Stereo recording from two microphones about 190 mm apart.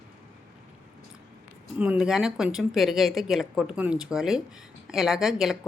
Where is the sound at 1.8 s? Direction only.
5° right (ahead or behind).